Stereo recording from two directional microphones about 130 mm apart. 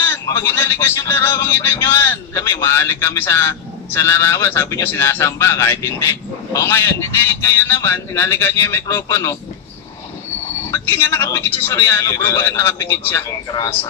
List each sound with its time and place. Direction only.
0.0 s music: 20° left (ahead or behind)
10.6 s music: 20° left (ahead or behind)